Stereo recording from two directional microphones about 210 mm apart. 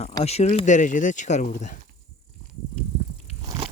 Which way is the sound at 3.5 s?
20° right (ahead or behind).